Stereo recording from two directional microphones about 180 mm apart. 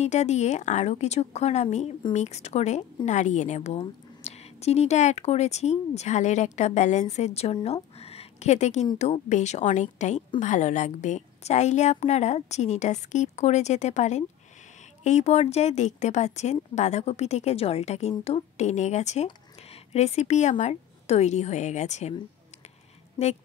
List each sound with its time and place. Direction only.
0.0 s speech: 40° left (ahead or behind)